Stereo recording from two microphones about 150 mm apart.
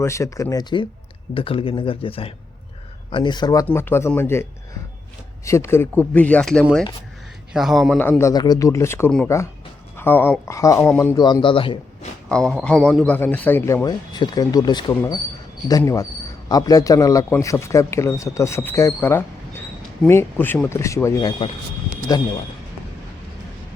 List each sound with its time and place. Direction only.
0.0 s speech: 20° left (ahead or behind)
3.7 s speech: 15° left (ahead or behind)
5.5 s a man's voice: 20° left (ahead or behind); by 7.9 s centre (ahead or behind)
8.2 s speech: 25° left (ahead or behind)
11.2 s speech: 30° left (ahead or behind)
12.3 s a man's voice: 5° left (ahead or behind)
13.8 s speech: 25° left (ahead or behind)
16.5 s speech: 25° left (ahead or behind)